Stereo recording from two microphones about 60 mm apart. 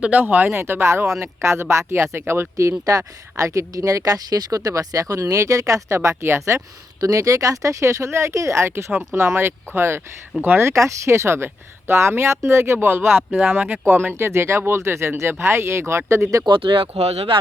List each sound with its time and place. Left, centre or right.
0.0 s speech: right
2.6 s speech: right
7.0 s speech: right
10.7 s speech: right